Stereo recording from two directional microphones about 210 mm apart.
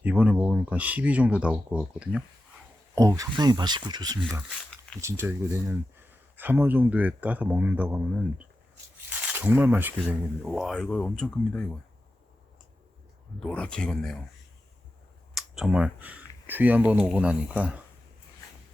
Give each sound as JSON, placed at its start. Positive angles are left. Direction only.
{"t": 0.0, "sound": "speech", "side_deg": -5}
{"t": 2.9, "sound": "speech", "side_deg": -15}
{"t": 13.4, "sound": "speech", "side_deg": 5}
{"t": 15.4, "sound": "speech", "side_deg": 0}